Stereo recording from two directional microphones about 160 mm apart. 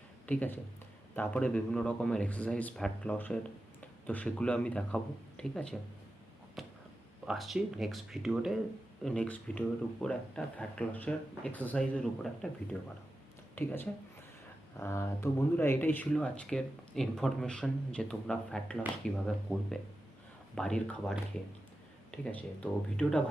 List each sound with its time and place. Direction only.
0.3 s speech: 10° left (ahead or behind)
6.6 s a sound: centre (ahead or behind)
7.3 s speech: centre (ahead or behind)
13.6 s speech: 10° left (ahead or behind)